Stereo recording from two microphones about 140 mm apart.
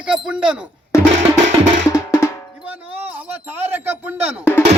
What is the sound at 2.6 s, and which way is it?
Speech, 10° right (ahead or behind).